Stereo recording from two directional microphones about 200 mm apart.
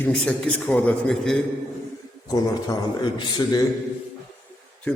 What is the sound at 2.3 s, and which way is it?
A man's voice, 20° left (ahead or behind).